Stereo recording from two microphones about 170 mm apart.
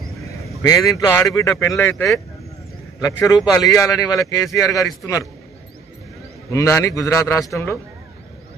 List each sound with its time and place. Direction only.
0.6 s a man's voice: 20° left (ahead or behind)
6.5 s a man's voice: 15° left (ahead or behind)